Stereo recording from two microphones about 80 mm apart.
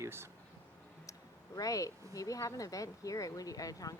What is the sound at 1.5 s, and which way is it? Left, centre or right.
Speech, left.